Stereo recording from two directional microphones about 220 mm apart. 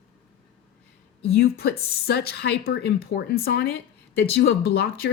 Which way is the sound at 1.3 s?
45° left (ahead or behind).